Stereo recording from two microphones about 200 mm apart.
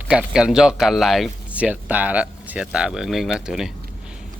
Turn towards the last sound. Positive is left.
turn(degrees=-5)  # may be behind; listen again after turning